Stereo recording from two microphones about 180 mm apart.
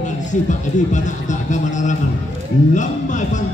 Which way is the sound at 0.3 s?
45° left (ahead or behind).